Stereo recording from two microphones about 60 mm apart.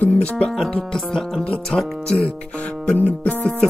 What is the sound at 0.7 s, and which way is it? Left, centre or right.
Music, centre.